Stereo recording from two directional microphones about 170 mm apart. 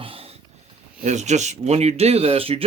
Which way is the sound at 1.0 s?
45° right (ahead or behind).